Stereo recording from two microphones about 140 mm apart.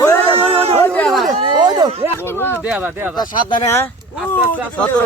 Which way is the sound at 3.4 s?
35° left (ahead or behind).